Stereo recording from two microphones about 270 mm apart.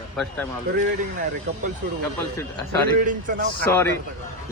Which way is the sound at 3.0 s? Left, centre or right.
Right.